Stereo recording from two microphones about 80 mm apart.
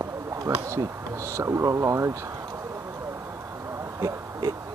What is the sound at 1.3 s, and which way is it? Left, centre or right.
Speech, right.